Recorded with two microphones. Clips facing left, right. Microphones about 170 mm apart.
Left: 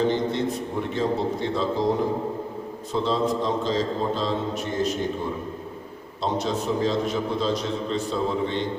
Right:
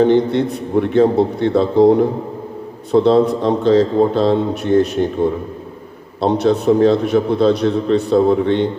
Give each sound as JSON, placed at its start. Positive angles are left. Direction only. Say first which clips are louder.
{"t": 0.0, "sound": "a man's voice", "louder": "right 10 dB", "side_deg": -65}